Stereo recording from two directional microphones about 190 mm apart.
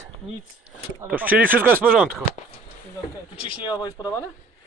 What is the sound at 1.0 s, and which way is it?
Speech, 10° right (ahead or behind).